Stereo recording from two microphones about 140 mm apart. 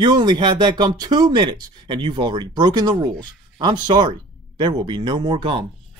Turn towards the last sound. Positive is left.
turn(degrees=-35)  # may be behind; listen again after turning